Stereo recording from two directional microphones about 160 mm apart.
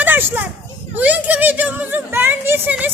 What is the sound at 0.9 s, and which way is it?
A child's voice, 10° right (ahead or behind).